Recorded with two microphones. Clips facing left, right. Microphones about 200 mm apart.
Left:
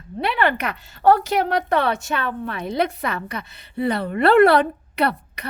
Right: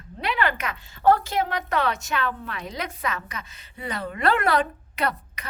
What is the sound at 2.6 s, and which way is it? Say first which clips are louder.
Speech: left 8 dB; 60° left (ahead or behind).